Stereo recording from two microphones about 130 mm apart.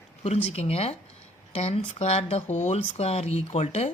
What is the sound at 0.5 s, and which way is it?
Speech, 50° left (ahead or behind).